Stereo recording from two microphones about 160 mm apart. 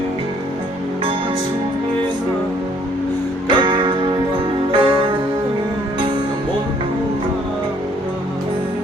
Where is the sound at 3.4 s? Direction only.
30° right (ahead or behind).